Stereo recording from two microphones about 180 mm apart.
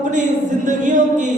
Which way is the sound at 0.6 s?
45° right (ahead or behind).